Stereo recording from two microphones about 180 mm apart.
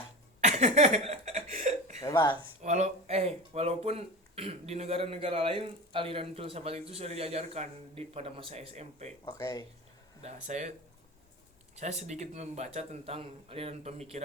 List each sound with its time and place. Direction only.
0.4 s cough: 40° right (ahead or behind)
2.0 s speech: 20° left (ahead or behind)
2.6 s speech: 40° right (ahead or behind)
9.4 s speech: 20° left (ahead or behind)
10.2 s speech: 40° right (ahead or behind)
11.8 s speech: 40° right (ahead or behind)